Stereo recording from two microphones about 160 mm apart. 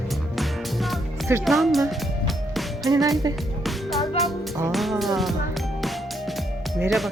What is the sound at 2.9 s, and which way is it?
Speech, 20° right (ahead or behind).